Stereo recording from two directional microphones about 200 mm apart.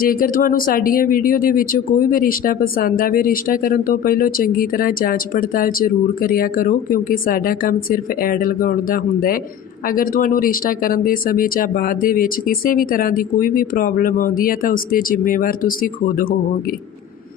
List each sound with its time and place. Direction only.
0.0 s speech: 45° left (ahead or behind)